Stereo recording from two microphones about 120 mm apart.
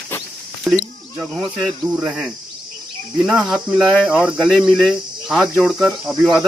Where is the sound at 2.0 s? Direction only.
10° right (ahead or behind).